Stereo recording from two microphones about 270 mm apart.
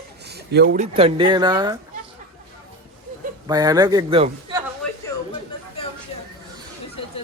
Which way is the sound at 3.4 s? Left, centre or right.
Centre.